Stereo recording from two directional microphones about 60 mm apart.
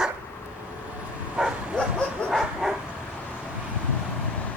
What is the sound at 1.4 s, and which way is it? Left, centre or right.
Bow-wow, centre.